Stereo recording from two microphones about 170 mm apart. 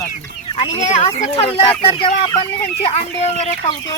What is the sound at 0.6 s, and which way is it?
Speech, 45° left (ahead or behind).